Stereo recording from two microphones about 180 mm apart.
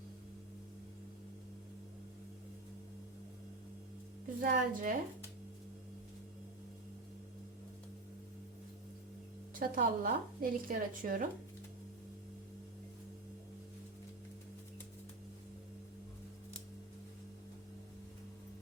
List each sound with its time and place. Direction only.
4.4 s a woman's voice: 45° right (ahead or behind)
9.6 s a woman's voice: 50° right (ahead or behind)